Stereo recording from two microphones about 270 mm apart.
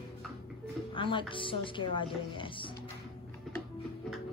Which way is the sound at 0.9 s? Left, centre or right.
Centre.